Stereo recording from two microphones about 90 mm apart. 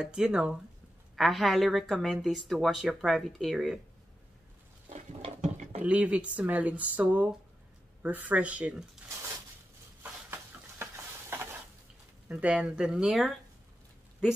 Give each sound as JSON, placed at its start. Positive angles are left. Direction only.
{"t": 0.0, "sound": "a woman's voice", "side_deg": -10}
{"t": 5.8, "sound": "speech", "side_deg": -15}
{"t": 10.0, "sound": "a sound", "side_deg": -25}
{"t": 12.3, "sound": "speech", "side_deg": -15}